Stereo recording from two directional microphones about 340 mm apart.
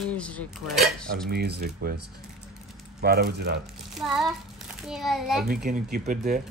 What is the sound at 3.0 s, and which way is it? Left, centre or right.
Speech, right.